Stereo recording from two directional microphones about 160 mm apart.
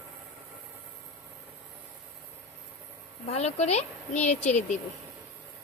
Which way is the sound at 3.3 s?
40° left (ahead or behind).